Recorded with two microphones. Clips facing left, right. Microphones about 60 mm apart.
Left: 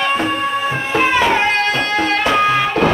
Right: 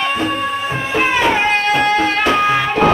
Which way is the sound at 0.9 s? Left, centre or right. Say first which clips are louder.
Left 1 dB; centre.